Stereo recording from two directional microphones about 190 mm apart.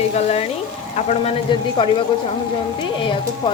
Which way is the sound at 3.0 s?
25° left (ahead or behind).